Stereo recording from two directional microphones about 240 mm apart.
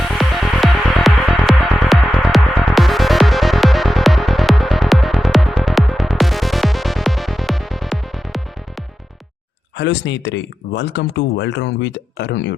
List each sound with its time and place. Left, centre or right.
0.1 s music: centre
9.7 s speech: left